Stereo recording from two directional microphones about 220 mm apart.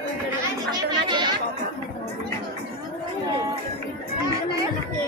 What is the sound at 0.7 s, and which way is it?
Chatter, 20° right (ahead or behind).